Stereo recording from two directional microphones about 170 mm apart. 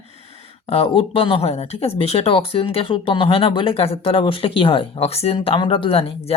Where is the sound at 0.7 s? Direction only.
35° left (ahead or behind).